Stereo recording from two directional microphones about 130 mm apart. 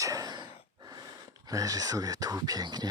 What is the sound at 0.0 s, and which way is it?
Gasp, 25° right (ahead or behind).